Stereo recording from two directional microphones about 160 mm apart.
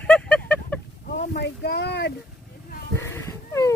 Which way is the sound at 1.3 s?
90° left.